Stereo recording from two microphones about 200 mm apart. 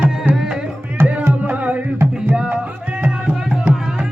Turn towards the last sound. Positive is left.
turn(degrees=-5)  # may be behind; listen again after turning